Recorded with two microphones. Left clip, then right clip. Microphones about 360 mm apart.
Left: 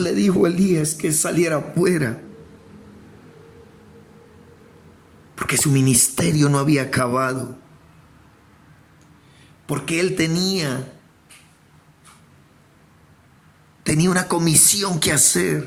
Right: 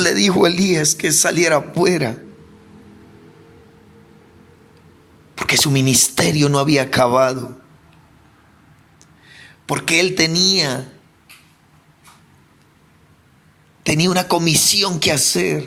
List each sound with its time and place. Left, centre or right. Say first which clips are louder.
0.0 s speech: right 4 dB; centre
5.3 s speech: right 5 dB; centre
9.6 s speech: right 5 dB; centre
13.9 s speech: right 3 dB; centre